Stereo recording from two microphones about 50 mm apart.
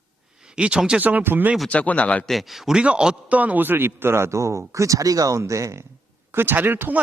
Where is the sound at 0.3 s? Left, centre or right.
Centre.